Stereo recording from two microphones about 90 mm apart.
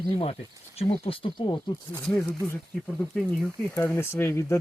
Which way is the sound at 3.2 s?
Centre (ahead or behind).